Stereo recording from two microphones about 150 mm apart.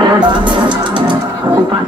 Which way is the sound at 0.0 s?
30° right (ahead or behind).